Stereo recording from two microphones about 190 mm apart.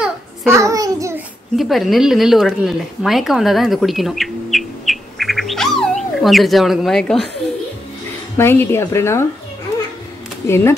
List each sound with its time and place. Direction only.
0.5 s a child's voice: 15° right (ahead or behind)
1.6 s speech: centre (ahead or behind)
8.4 s a woman's voice: 10° left (ahead or behind)
10.5 s a woman's voice: 15° left (ahead or behind)